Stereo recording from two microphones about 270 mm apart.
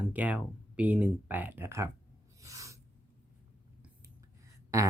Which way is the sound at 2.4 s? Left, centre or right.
Centre.